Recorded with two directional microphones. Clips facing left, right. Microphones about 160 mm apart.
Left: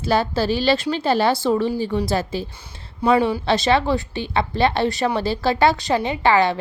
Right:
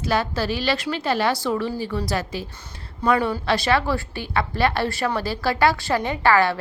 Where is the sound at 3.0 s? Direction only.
10° left (ahead or behind).